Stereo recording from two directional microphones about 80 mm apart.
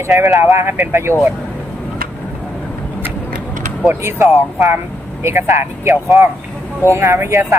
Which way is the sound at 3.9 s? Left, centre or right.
Right.